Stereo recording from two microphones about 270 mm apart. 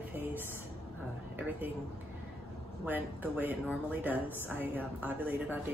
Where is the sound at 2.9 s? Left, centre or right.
Centre.